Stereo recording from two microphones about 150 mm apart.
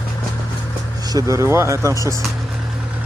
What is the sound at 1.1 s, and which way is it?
Speech, 20° right (ahead or behind).